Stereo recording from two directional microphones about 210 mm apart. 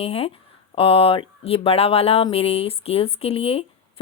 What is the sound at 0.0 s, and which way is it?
Speech, 30° left (ahead or behind).